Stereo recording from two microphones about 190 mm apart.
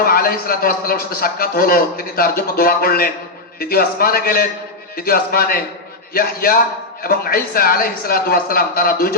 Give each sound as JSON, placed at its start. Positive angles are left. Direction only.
{"t": 0.0, "sound": "a man's voice", "side_deg": 50}